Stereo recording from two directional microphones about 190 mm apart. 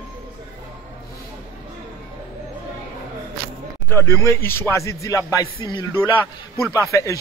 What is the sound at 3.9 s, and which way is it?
Speech, 15° left (ahead or behind).